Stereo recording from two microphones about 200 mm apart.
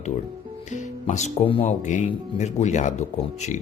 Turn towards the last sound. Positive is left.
turn(degrees=35)  # may be behind; listen again after turning